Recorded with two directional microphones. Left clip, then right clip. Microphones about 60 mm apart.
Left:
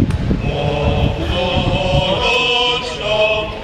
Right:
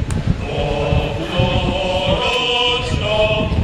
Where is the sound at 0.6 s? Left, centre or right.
Centre.